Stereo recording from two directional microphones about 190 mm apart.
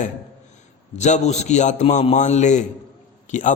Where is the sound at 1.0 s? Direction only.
40° left (ahead or behind).